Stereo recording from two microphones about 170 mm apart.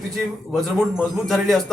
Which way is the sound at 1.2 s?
Centre (ahead or behind).